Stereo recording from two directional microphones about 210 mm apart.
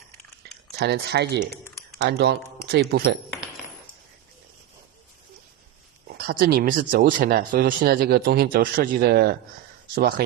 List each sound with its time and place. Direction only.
0.4 s a sound: 50° right (ahead or behind)
0.8 s speech: 50° right (ahead or behind)
6.1 s speech: 45° right (ahead or behind)